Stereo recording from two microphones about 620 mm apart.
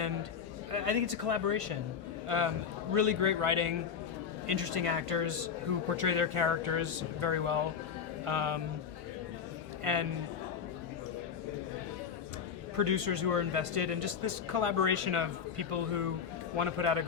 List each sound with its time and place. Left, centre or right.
0.7 s a man's voice: right
9.8 s a man's voice: right
12.7 s a man's voice: right